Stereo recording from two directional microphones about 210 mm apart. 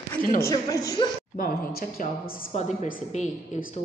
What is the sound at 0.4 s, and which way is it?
Speech, 15° left (ahead or behind).